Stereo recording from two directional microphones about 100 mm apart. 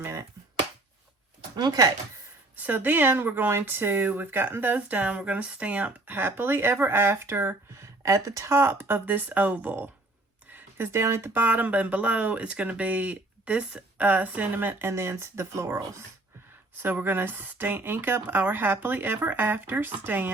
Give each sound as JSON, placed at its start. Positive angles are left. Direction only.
{"t": 0.0, "sound": "finger snapping", "side_deg": -25}
{"t": 1.5, "sound": "speech", "side_deg": -40}
{"t": 2.6, "sound": "speech", "side_deg": -15}
{"t": 16.8, "sound": "speech", "side_deg": -20}